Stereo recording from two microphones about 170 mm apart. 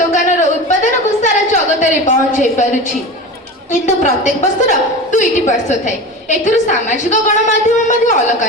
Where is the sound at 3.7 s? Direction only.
45° left (ahead or behind).